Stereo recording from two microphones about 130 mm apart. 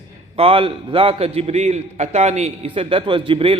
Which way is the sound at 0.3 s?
45° right (ahead or behind).